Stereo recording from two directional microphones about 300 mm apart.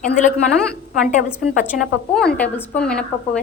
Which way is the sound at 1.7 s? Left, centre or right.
Centre.